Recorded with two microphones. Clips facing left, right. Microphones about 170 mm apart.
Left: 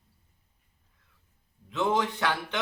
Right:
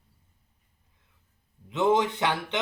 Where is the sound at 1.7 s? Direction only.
20° right (ahead or behind).